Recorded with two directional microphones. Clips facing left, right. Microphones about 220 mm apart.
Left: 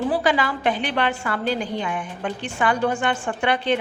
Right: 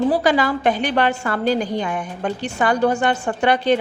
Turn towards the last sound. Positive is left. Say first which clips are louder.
# right 5 dB
turn(degrees=-40)  # may be behind; listen again after turning